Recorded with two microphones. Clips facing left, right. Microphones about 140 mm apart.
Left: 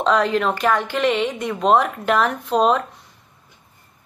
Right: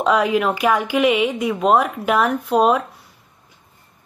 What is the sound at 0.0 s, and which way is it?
Speech, 10° right (ahead or behind).